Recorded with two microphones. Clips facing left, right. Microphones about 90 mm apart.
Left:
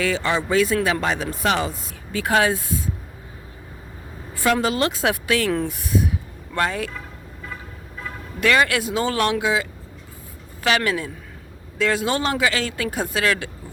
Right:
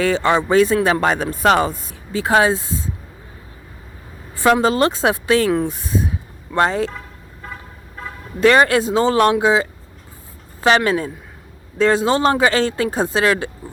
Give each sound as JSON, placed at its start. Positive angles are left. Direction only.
{"t": 0.0, "sound": "speech", "side_deg": -35}
{"t": 2.1, "sound": "speech", "side_deg": -25}
{"t": 4.4, "sound": "speech", "side_deg": -30}
{"t": 8.4, "sound": "speech", "side_deg": -35}